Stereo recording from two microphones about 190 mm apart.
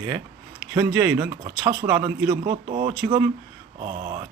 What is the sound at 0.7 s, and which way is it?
Speech, 20° right (ahead or behind).